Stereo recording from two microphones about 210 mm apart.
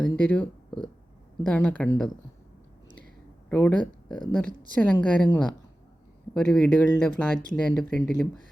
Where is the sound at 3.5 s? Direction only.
10° left (ahead or behind).